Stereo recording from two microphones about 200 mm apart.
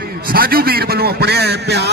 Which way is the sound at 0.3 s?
45° right (ahead or behind).